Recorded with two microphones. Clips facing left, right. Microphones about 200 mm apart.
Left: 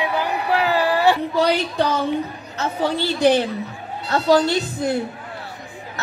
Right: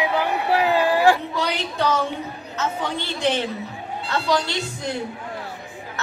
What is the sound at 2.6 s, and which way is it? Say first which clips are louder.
A woman's voice: left 5 dB; 35° left (ahead or behind).